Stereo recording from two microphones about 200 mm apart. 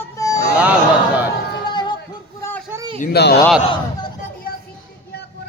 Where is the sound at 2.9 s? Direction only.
40° left (ahead or behind).